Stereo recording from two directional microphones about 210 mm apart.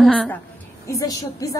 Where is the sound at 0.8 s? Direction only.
15° left (ahead or behind).